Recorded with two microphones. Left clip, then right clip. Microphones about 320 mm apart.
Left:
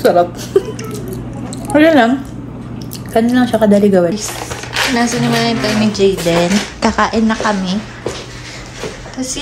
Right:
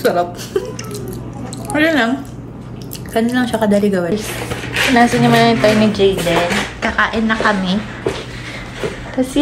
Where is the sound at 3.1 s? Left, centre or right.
Centre.